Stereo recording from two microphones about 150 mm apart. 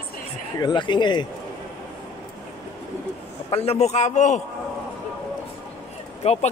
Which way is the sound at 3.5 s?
40° left (ahead or behind).